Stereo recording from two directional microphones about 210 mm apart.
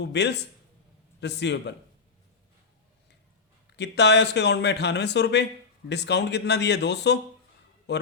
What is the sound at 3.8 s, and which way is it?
A man's voice, 55° left (ahead or behind).